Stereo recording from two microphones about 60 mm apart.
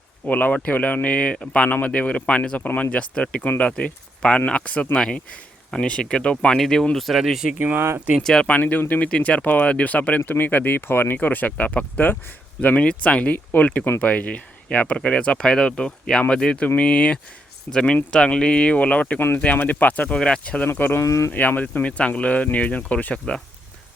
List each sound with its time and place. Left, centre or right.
0.3 s speech: left
4.9 s speech: centre
7.8 s speech: right
8.2 s speech: centre
8.4 s speech: left
20.1 s speech: centre
20.7 s speech: left
21.0 s speech: left
21.3 s speech: left